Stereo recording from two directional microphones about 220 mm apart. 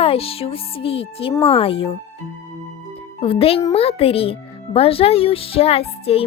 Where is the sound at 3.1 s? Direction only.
25° left (ahead or behind).